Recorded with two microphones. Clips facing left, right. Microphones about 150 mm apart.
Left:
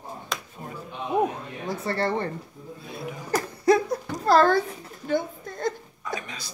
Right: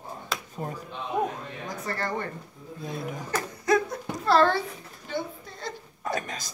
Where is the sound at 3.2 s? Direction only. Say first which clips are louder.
Left 5 dB; 35° left (ahead or behind).